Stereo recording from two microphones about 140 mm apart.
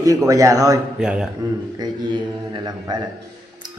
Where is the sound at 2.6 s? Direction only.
30° right (ahead or behind).